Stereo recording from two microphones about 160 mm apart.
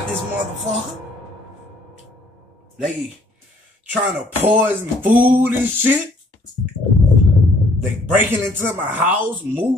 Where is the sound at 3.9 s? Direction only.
10° right (ahead or behind).